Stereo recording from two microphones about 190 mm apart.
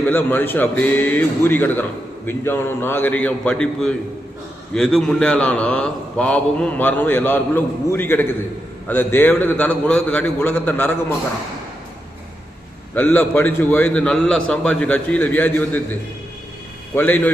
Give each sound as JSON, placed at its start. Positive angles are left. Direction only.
{"t": 0.1, "sound": "speech", "side_deg": 10}
{"t": 12.9, "sound": "speech", "side_deg": 10}
{"t": 16.9, "sound": "speech", "side_deg": 10}